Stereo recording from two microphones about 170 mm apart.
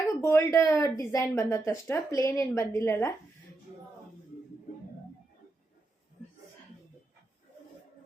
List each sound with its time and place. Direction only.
0.0 s speech: 15° left (ahead or behind)